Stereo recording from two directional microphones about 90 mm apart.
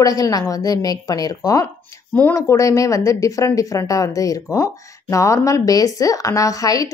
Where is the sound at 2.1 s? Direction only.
20° left (ahead or behind).